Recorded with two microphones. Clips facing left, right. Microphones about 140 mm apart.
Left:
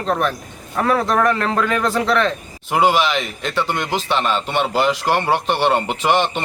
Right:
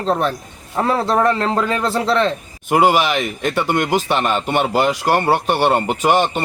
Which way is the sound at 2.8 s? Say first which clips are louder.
Left 1 dB; 10° right (ahead or behind).